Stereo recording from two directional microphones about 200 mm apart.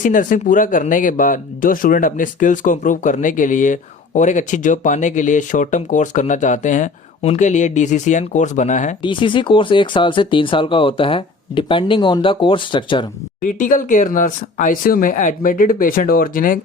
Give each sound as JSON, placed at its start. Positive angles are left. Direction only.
{"t": 0.0, "sound": "speech", "side_deg": 40}
{"t": 9.0, "sound": "speech", "side_deg": 25}
{"t": 13.4, "sound": "speech", "side_deg": 40}